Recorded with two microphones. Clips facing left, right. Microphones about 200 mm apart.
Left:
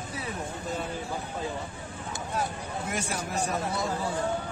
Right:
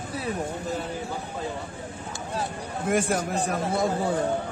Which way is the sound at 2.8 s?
50° right (ahead or behind).